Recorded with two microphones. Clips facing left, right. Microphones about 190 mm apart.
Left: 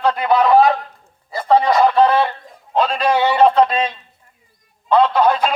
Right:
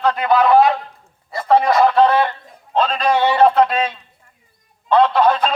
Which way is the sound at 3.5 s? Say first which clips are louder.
Left 1 dB; 5° right (ahead or behind).